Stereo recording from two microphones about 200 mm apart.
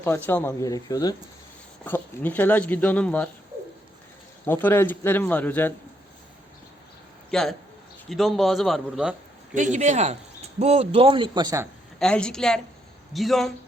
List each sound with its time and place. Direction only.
0.0 s speech: 10° left (ahead or behind)
4.4 s speech: 10° left (ahead or behind)
7.3 s a man's voice: centre (ahead or behind)
9.7 s a man's voice: 35° right (ahead or behind); by 11.7 s 15° right (ahead or behind)
11.9 s a man's voice: 5° left (ahead or behind)